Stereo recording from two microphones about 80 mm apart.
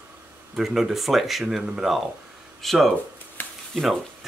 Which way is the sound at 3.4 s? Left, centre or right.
Left.